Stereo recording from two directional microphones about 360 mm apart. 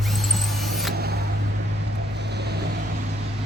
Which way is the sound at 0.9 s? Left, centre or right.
Right.